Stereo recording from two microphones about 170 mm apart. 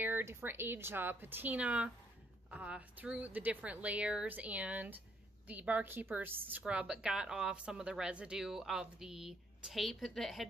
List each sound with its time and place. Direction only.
0.0 s a woman's voice: 15° right (ahead or behind)